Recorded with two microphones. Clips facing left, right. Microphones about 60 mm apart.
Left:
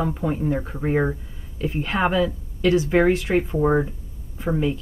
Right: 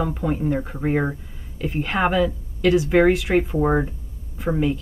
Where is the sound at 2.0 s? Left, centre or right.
Right.